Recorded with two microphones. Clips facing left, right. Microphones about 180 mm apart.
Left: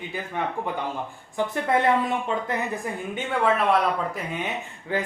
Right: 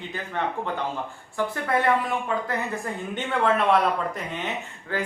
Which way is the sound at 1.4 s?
20° left (ahead or behind).